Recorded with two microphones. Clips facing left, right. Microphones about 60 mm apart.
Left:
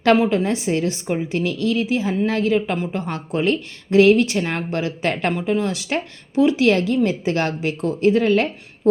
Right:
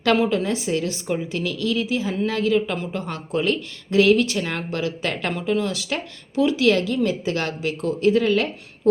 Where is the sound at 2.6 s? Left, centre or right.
Left.